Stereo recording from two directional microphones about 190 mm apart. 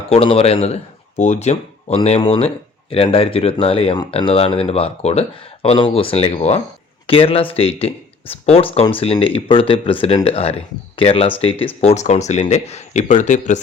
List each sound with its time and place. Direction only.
0.1 s speech: 30° left (ahead or behind)